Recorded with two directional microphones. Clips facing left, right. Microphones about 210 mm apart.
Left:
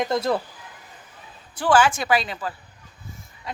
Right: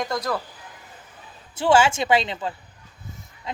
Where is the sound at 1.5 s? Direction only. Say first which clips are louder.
Right 1 dB; 25° right (ahead or behind).